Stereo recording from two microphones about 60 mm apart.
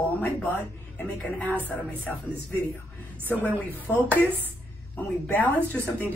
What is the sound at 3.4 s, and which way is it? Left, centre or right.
Speech, left.